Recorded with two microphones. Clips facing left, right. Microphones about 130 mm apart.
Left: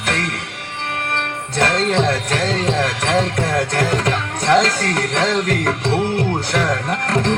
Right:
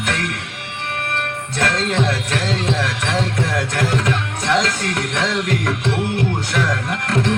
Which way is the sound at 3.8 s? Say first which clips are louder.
Left 1 dB; 35° left (ahead or behind).